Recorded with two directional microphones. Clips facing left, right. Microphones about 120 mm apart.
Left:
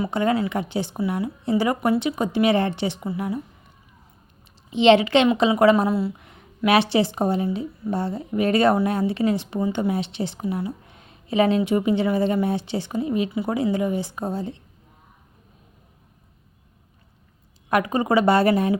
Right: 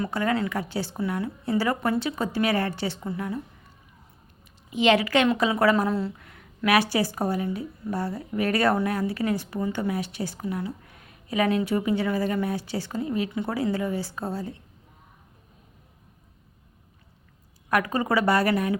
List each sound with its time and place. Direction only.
0.1 s speech: 20° left (ahead or behind)
4.7 s speech: 25° left (ahead or behind)
5.9 s speech: 10° left (ahead or behind)
6.2 s speech: 20° left (ahead or behind)
17.7 s speech: 20° left (ahead or behind)